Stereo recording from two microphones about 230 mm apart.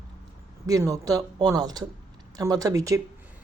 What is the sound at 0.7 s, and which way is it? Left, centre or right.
Speech, centre.